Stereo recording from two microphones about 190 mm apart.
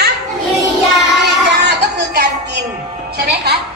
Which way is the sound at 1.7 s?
60° right (ahead or behind).